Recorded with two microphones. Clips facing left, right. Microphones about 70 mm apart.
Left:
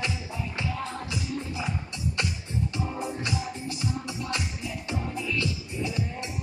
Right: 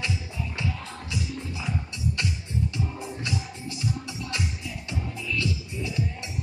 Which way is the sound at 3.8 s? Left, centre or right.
Left.